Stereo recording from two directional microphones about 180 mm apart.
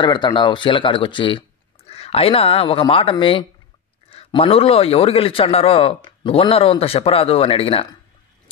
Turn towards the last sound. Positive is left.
turn(degrees=35)  # may be behind; listen again after turning